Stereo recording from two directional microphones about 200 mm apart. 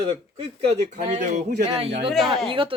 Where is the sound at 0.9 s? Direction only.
35° right (ahead or behind).